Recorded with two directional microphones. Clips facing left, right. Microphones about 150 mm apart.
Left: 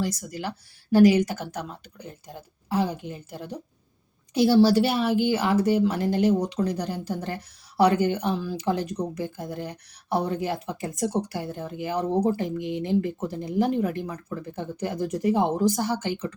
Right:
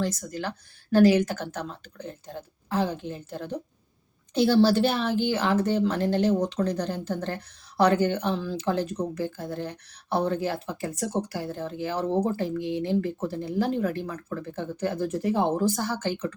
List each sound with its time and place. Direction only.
0.0 s speech: 10° left (ahead or behind)